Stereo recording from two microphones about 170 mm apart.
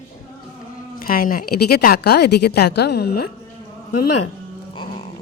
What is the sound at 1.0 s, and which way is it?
Speech, 60° left (ahead or behind).